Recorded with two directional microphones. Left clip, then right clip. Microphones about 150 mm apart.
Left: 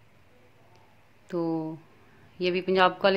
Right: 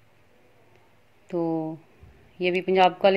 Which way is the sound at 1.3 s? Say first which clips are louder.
Right 3 dB; 15° right (ahead or behind).